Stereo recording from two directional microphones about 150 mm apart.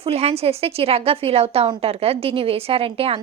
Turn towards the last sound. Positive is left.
turn(degrees=-40)  # may be behind; listen again after turning